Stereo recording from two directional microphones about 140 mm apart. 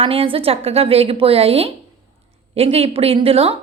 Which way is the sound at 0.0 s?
40° right (ahead or behind).